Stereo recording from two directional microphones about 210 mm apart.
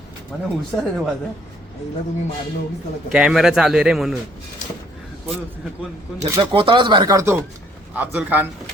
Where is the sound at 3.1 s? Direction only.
5° right (ahead or behind).